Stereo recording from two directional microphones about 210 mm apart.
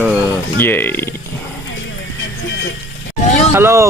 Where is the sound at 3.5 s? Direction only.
10° right (ahead or behind).